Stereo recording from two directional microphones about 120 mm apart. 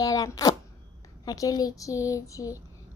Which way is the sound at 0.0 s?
30° left (ahead or behind).